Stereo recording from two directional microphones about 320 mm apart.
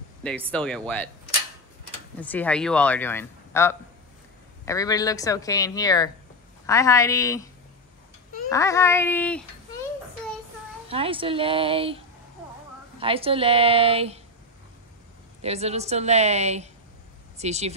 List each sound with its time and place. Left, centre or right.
0.2 s speech: centre
2.1 s speech: centre
8.5 s speech: centre
10.9 s a woman's voice: centre
13.0 s a woman's voice: centre
15.4 s a woman's voice: centre